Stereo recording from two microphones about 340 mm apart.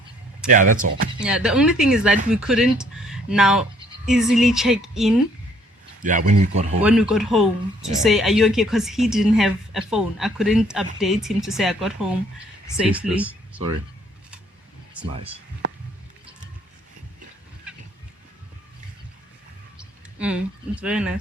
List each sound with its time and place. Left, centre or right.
0.4 s speech: right
1.2 s speech: centre
6.0 s speech: right
6.8 s speech: centre
19.8 s a sound: centre
20.8 s speech: centre